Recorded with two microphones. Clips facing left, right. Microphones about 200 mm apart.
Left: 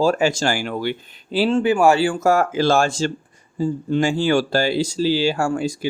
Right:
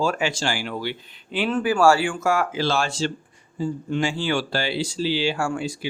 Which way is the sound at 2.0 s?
40° left (ahead or behind).